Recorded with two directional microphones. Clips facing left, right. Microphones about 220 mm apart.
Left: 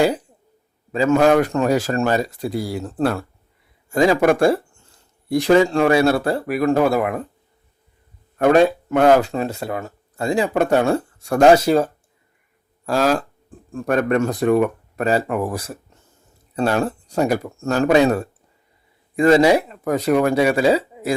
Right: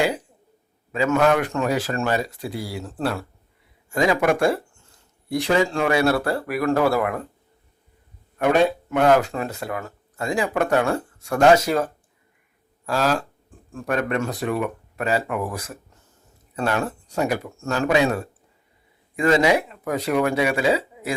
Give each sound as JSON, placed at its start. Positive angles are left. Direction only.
{"t": 0.9, "sound": "speech", "side_deg": 35}
{"t": 3.8, "sound": "speech", "side_deg": 35}
{"t": 9.2, "sound": "speech", "side_deg": 25}